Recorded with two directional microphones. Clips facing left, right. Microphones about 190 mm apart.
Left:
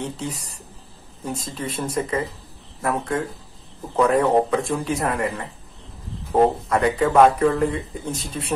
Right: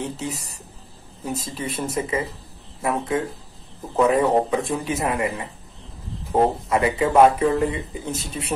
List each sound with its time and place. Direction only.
0.0 s a man's voice: 5° right (ahead or behind)
1.4 s a man's voice: 5° right (ahead or behind)